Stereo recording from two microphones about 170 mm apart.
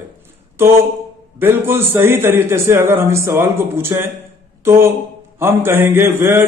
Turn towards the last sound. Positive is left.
turn(degrees=-15)  # may be behind; listen again after turning